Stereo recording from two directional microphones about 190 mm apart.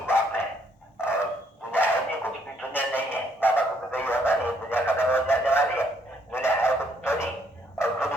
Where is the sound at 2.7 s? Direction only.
10° left (ahead or behind).